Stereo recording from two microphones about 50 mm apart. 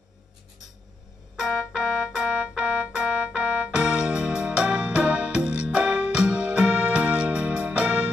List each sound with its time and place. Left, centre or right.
1.4 s organ: centre
3.1 s keyboard: centre
5.7 s music: right